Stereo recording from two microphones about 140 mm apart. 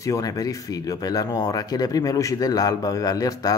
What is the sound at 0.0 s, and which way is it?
Speech, 25° left (ahead or behind).